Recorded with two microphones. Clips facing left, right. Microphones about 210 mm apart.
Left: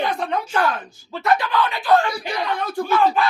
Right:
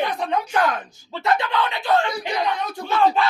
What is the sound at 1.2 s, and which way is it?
Speech, 20° right (ahead or behind).